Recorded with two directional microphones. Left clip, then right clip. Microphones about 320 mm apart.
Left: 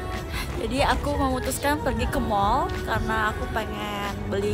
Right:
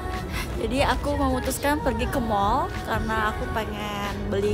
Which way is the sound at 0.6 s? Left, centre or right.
Centre.